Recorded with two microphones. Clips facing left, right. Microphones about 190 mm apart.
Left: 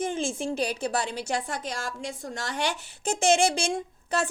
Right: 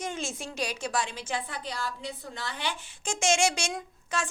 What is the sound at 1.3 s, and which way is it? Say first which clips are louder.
A woman's voice: left 3 dB; 45° left (ahead or behind).